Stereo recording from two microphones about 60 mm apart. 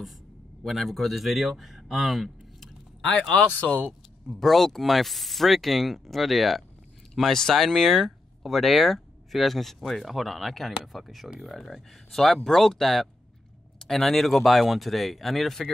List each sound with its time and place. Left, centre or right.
0.7 s speech: centre
3.0 s speech: centre
3.3 s speech: left
3.8 s speech: centre